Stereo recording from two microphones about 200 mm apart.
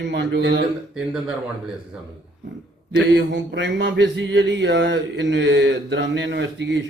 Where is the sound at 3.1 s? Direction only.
60° right (ahead or behind).